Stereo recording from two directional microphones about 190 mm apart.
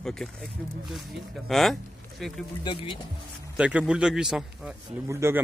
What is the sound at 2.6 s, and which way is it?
Speech, 25° left (ahead or behind).